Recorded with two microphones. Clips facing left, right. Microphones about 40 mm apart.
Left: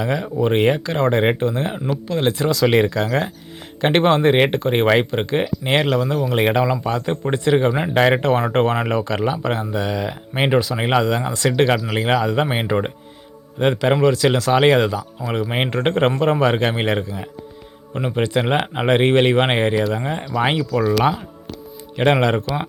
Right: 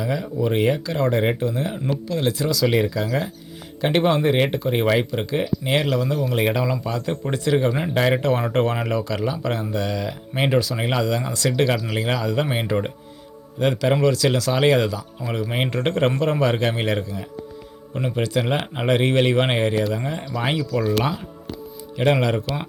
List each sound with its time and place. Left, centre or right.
0.0 s speech: left
9.7 s speech: left
20.6 s speech: centre
21.9 s speech: left